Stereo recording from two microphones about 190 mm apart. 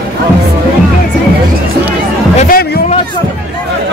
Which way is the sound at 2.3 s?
45° left (ahead or behind).